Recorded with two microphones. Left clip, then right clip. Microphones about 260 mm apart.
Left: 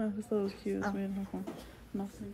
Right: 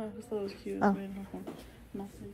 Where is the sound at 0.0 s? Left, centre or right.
Left.